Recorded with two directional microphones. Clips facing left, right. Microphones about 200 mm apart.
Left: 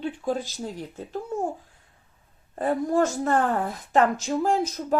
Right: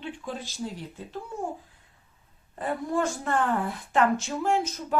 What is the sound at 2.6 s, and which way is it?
A woman's voice, 40° left (ahead or behind).